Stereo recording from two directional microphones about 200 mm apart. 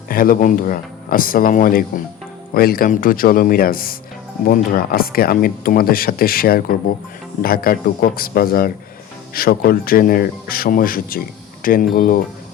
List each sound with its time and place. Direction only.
0.1 s speech: 45° left (ahead or behind)